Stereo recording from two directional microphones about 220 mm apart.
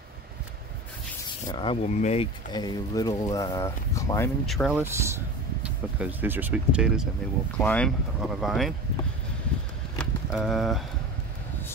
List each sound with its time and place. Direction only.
1.5 s speech: 25° left (ahead or behind)
2.5 s speech: 15° left (ahead or behind)
4.5 s speech: centre (ahead or behind)
9.9 s a sound: centre (ahead or behind)